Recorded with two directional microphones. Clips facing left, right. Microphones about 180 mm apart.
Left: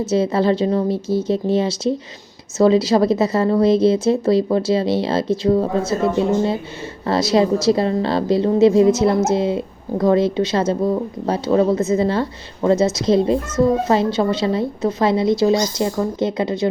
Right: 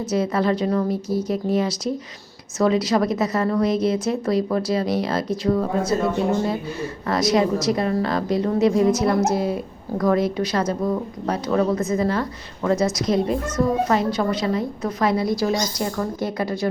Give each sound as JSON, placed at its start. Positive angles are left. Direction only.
{"t": 0.0, "sound": "a woman's voice", "side_deg": 25}
{"t": 7.1, "sound": "a woman's voice", "side_deg": 30}